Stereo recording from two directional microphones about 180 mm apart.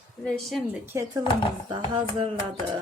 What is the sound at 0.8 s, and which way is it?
Speech, 15° right (ahead or behind).